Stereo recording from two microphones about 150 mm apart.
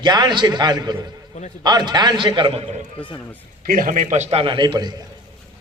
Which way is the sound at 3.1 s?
15° left (ahead or behind).